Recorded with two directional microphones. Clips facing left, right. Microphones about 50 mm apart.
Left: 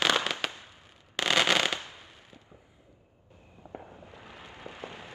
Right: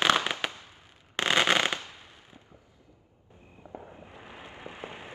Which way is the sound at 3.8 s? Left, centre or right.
Right.